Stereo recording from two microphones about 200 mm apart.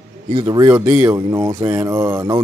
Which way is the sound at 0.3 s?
20° right (ahead or behind).